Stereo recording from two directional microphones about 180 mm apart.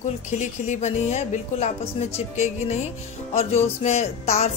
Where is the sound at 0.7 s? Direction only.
40° left (ahead or behind).